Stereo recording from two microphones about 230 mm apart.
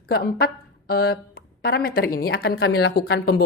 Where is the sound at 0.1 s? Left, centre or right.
Left.